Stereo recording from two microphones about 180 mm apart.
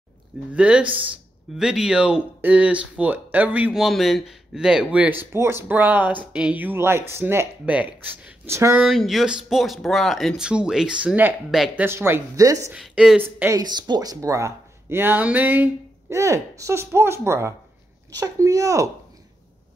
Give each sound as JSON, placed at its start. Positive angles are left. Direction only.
{"t": 0.5, "sound": "speech", "side_deg": -5}
{"t": 8.8, "sound": "speech", "side_deg": 0}
{"t": 12.7, "sound": "speech", "side_deg": -5}
{"t": 13.5, "sound": "speech", "side_deg": -20}